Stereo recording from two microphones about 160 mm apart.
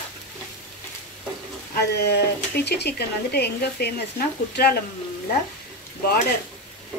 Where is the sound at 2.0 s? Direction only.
90° left.